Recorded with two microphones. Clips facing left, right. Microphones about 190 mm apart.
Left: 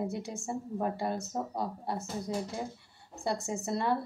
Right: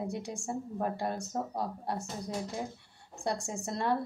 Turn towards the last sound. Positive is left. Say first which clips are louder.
# left 1 dB
turn(degrees=5)  # may be behind; listen again after turning